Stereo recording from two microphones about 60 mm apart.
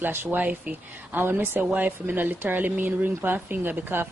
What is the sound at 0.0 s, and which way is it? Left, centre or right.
Speech, right.